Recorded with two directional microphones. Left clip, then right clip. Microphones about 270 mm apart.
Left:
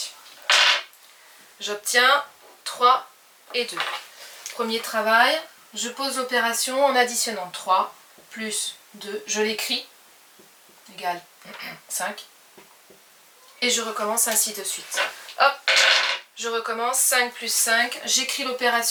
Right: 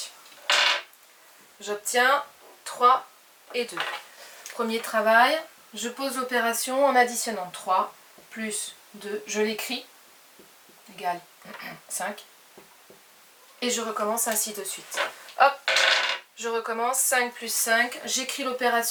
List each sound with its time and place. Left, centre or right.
0.4 s creak: centre
1.6 s speech: centre
3.7 s speech: centre
9.3 s speech: centre
11.0 s speech: centre
13.6 s speech: centre
15.7 s coin: centre
17.6 s speech: centre